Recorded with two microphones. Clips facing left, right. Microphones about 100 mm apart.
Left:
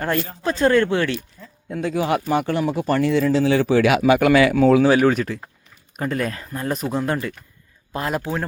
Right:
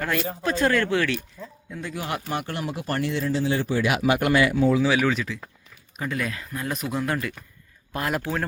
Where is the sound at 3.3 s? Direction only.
90° left.